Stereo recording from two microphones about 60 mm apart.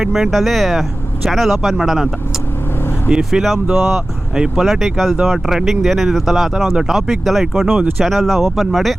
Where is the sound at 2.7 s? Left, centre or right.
Left.